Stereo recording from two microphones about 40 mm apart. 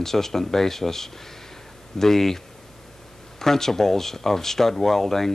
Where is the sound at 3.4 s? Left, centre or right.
Centre.